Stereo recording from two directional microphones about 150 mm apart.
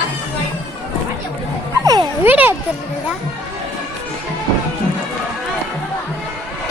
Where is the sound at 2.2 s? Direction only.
10° right (ahead or behind).